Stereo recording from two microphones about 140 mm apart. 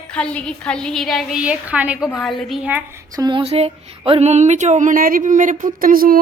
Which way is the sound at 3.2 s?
30° right (ahead or behind).